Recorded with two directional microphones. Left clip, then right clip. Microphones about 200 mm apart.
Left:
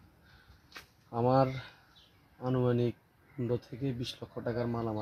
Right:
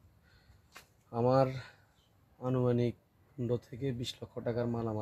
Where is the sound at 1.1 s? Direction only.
15° right (ahead or behind).